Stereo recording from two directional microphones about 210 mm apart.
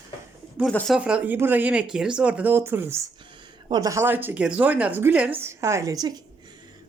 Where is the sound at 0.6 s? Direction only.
5° left (ahead or behind).